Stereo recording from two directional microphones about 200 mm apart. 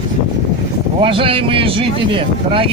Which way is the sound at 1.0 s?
25° right (ahead or behind).